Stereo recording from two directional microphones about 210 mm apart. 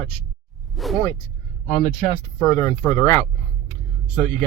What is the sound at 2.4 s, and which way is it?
Speech, 15° left (ahead or behind).